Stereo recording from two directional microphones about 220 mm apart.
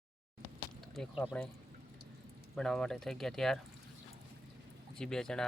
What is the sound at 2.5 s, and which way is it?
Speech, 5° left (ahead or behind).